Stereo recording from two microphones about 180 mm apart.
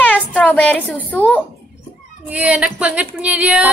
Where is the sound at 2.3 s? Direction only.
10° right (ahead or behind).